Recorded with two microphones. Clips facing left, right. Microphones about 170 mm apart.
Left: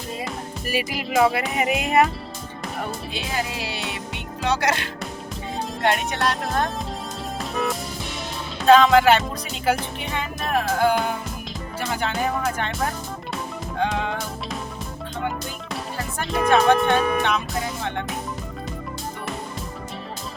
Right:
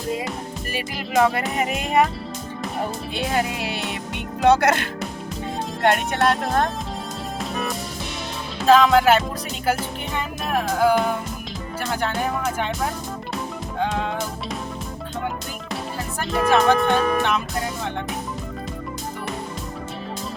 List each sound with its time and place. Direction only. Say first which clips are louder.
0.7 s speech: left 2 dB; 5° left (ahead or behind)
3.2 s speech: right 5 dB; 55° right (ahead or behind)
8.6 s speech: left 1 dB; centre (ahead or behind)
16.2 s speech: even; centre (ahead or behind)